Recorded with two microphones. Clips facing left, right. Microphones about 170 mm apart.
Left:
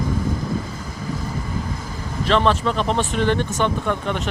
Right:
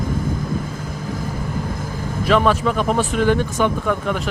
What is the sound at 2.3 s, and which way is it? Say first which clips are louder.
Speech: right 2 dB; 10° right (ahead or behind).